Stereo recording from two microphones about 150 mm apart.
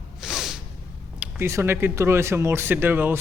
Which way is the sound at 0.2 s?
Centre (ahead or behind).